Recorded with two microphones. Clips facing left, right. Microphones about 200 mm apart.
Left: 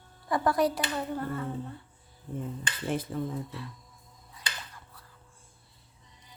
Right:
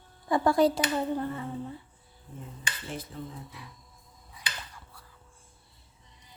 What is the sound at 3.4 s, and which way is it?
Speech, 15° right (ahead or behind).